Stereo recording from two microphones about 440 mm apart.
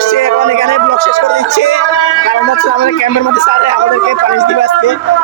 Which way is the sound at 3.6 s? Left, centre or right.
Left.